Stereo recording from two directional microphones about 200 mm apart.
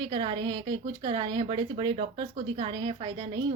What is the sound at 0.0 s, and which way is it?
Speech, 25° right (ahead or behind).